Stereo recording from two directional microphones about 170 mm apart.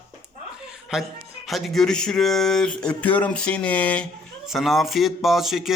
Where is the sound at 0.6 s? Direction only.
5° right (ahead or behind).